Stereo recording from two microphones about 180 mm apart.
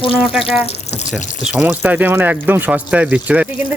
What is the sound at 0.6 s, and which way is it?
Water, 40° left (ahead or behind).